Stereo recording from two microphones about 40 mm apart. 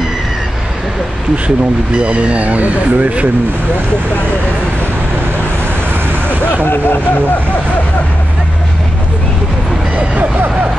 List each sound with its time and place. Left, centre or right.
2.0 s speech: right
6.4 s speech: left